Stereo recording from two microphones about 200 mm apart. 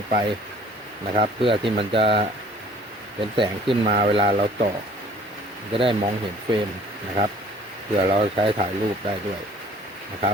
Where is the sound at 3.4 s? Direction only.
25° right (ahead or behind).